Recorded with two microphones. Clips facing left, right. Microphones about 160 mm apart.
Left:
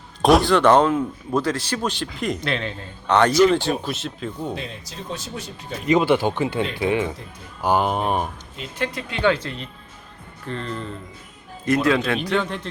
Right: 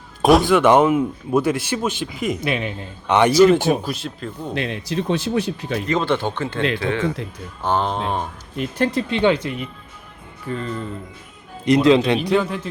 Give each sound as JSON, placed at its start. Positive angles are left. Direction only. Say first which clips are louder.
{"t": 0.2, "sound": "speech", "louder": "right 2 dB", "side_deg": 0}
{"t": 3.7, "sound": "speech", "louder": "right 4 dB", "side_deg": 0}
{"t": 4.5, "sound": "speech", "louder": "right 9 dB", "side_deg": -80}
{"t": 5.9, "sound": "speech", "louder": "left 4 dB", "side_deg": 15}
{"t": 8.8, "sound": "speech", "louder": "right 4 dB", "side_deg": -30}
{"t": 11.6, "sound": "speech", "louder": "right 5 dB", "side_deg": -20}
{"t": 12.3, "sound": "speech", "louder": "right 4 dB", "side_deg": -5}